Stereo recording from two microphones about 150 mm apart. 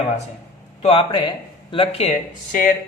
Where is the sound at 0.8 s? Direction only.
35° left (ahead or behind).